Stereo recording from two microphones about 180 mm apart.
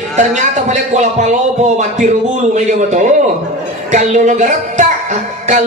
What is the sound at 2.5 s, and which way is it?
Speech, 40° right (ahead or behind).